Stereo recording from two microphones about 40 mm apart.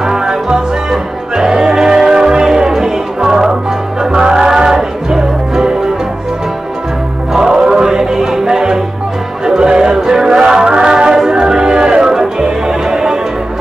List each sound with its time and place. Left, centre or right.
0.0 s music: centre
7.3 s music: centre